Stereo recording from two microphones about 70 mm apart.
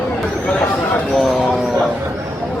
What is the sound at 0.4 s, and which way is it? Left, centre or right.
Speech, centre.